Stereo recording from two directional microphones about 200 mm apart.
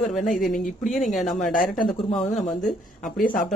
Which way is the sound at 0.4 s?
Centre (ahead or behind).